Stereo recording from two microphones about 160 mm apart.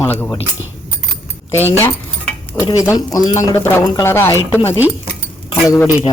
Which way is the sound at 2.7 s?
20° left (ahead or behind).